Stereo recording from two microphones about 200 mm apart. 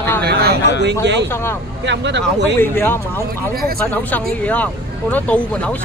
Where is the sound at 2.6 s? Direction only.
10° left (ahead or behind).